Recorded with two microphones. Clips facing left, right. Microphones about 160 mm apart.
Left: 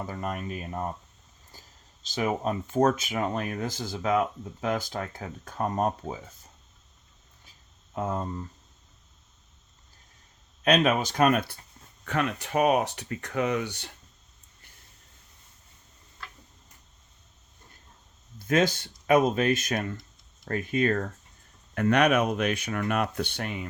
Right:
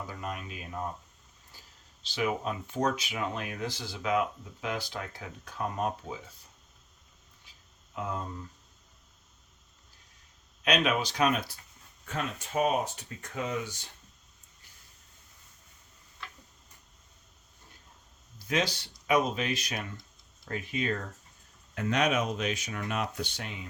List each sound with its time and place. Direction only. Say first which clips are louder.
0.1 s speech: left 6 dB; 45° left (ahead or behind)
1.5 s a sound: left 4 dB; 45° left (ahead or behind)
2.0 s speech: left 3 dB; 45° left (ahead or behind)
7.9 s speech: left 5 dB; 45° left (ahead or behind)
10.6 s speech: left 5 dB; 45° left (ahead or behind)
12.0 s speech: left 7 dB; 70° left (ahead or behind)
18.3 s speech: left 6 dB; 50° left (ahead or behind)
21.8 s speech: left 6 dB; 60° left (ahead or behind)